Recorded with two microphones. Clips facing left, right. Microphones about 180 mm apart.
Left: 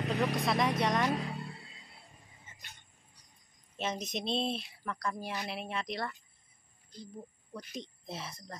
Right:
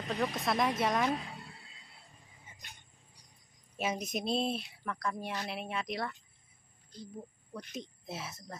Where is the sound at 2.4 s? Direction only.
15° right (ahead or behind).